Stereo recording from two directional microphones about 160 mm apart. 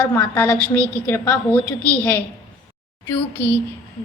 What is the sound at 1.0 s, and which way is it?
Speech, 10° left (ahead or behind).